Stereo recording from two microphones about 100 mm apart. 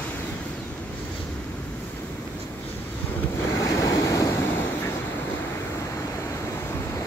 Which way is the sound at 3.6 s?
35° left (ahead or behind).